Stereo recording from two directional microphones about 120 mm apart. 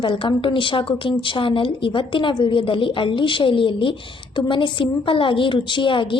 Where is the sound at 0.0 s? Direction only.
45° left (ahead or behind).